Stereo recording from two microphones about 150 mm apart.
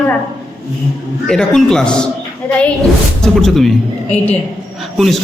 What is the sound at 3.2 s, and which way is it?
Speech, centre (ahead or behind).